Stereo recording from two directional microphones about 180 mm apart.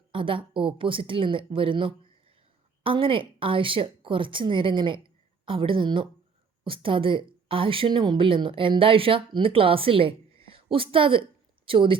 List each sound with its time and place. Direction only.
0.1 s speech: 30° right (ahead or behind)